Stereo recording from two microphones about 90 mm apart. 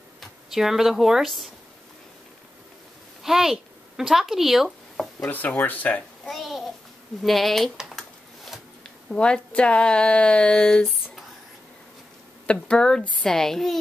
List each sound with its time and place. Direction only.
0.2 s speech: 5° right (ahead or behind)
3.3 s speech: 5° right (ahead or behind)
5.3 s speech: 20° left (ahead or behind)
6.2 s a sound: centre (ahead or behind)
7.2 s speech: centre (ahead or behind)
8.8 s speech: 10° left (ahead or behind)
12.4 s speech: 10° left (ahead or behind)